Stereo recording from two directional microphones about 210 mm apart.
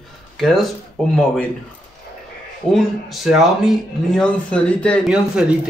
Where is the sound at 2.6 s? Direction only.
5° left (ahead or behind).